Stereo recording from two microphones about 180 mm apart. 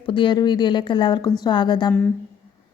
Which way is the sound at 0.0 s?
25° left (ahead or behind).